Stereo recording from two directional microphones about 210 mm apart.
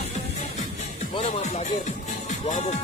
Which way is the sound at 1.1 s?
30° left (ahead or behind).